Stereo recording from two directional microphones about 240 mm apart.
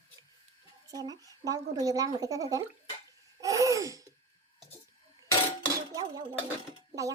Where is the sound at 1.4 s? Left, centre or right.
Centre.